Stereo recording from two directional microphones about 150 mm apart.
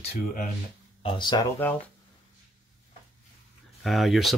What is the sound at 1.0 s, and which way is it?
Speech, 35° left (ahead or behind).